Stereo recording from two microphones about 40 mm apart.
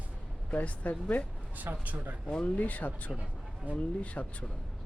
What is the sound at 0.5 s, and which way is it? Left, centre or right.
Speech, left.